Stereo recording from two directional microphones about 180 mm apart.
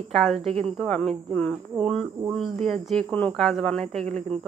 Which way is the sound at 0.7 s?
5° left (ahead or behind).